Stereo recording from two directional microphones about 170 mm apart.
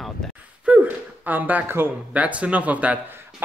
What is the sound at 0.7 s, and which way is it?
Speech, 10° right (ahead or behind).